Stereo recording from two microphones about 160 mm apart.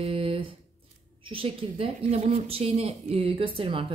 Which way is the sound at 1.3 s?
35° right (ahead or behind).